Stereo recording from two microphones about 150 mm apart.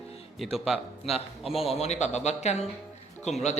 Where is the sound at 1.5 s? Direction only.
40° left (ahead or behind).